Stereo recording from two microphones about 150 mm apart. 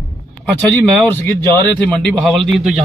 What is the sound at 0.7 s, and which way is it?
Speech, 15° left (ahead or behind).